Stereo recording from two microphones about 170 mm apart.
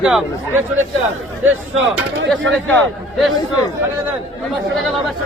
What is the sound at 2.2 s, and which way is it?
Speech, centre (ahead or behind).